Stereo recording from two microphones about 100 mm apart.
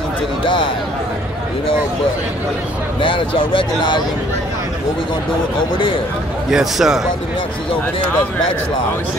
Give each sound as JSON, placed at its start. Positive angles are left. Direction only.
{"t": 3.0, "sound": "speech", "side_deg": 60}
{"t": 6.5, "sound": "a man's voice", "side_deg": -5}